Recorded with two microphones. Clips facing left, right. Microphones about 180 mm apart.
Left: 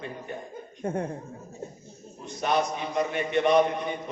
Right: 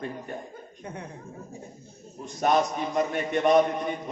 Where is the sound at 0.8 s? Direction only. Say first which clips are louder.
Left 10 dB; 50° left (ahead or behind).